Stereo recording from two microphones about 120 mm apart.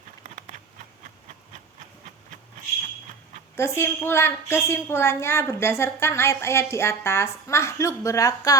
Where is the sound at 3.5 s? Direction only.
20° left (ahead or behind).